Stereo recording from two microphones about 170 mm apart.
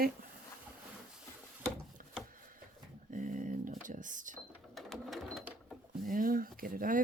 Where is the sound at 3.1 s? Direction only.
50° right (ahead or behind).